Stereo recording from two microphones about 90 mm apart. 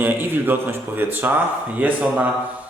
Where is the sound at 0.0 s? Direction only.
20° right (ahead or behind).